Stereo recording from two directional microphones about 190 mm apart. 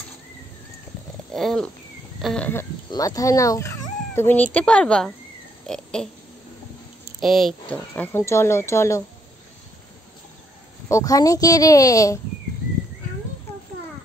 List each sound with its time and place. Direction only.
1.3 s wild animals: centre (ahead or behind)
2.2 s speech: 5° left (ahead or behind)
2.9 s speech: 20° left (ahead or behind)
7.2 s speech: centre (ahead or behind)
10.9 s speech: 15° left (ahead or behind)